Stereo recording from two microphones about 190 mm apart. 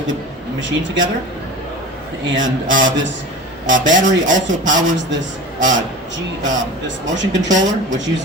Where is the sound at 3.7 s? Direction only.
40° right (ahead or behind).